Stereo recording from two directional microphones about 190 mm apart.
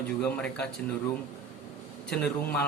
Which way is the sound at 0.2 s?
5° left (ahead or behind).